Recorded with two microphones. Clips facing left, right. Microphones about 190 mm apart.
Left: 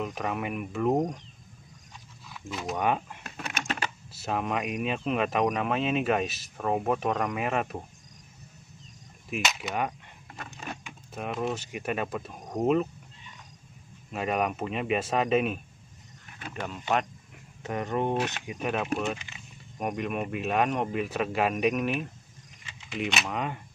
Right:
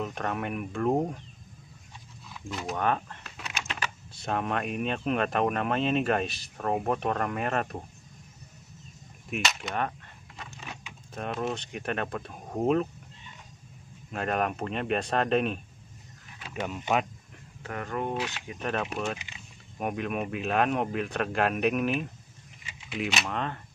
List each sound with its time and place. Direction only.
0.0 s speech: 5° left (ahead or behind)
2.2 s a sound: centre (ahead or behind)
2.7 s speech: 10° left (ahead or behind)
3.3 s typing: 50° left (ahead or behind)
4.1 s speech: 5° left (ahead or behind)
9.3 s speech: centre (ahead or behind)
11.1 s speech: centre (ahead or behind)
12.4 s speech: 5° right (ahead or behind)
14.1 s speech: 5° left (ahead or behind)
16.6 s speech: 10° right (ahead or behind)
17.6 s speech: 20° left (ahead or behind)
18.5 s speech: 5° left (ahead or behind)